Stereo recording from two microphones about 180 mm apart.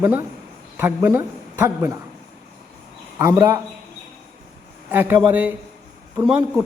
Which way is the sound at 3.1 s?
15° right (ahead or behind).